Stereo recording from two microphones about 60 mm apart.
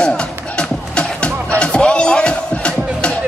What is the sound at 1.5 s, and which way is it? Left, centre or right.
Music, centre.